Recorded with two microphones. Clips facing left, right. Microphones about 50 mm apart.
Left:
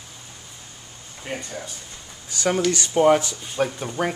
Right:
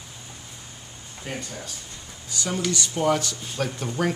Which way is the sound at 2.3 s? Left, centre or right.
Left.